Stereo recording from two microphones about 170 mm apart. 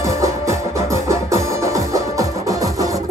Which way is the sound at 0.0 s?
15° right (ahead or behind).